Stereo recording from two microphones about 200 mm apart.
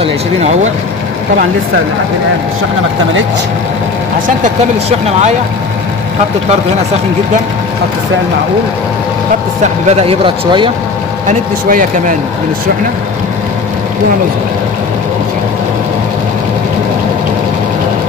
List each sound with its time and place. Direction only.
0.0 s speech: 35° right (ahead or behind)
4.8 s speech: 30° right (ahead or behind)
9.8 s speech: 30° right (ahead or behind)
11.2 s speech: 40° right (ahead or behind)